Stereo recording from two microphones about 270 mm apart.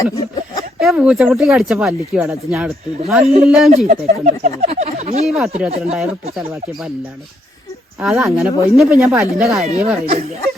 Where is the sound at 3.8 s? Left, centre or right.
Right.